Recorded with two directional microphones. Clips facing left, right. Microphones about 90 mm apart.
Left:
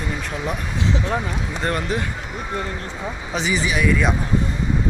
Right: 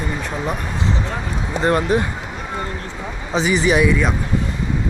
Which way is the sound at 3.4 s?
45° right (ahead or behind).